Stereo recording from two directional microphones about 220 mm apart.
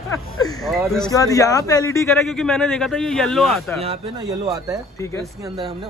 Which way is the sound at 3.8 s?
20° right (ahead or behind).